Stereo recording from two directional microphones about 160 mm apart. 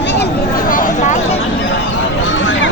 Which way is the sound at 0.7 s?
55° left (ahead or behind).